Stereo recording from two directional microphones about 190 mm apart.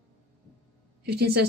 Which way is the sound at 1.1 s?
60° right (ahead or behind).